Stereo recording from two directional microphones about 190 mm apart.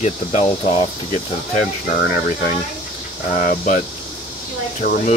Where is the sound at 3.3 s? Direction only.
40° left (ahead or behind).